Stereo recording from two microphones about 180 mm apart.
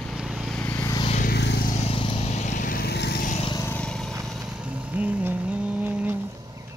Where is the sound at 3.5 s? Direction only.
10° left (ahead or behind); by 6.1 s 10° right (ahead or behind).